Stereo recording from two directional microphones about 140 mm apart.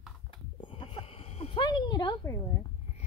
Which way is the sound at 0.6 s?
35° left (ahead or behind).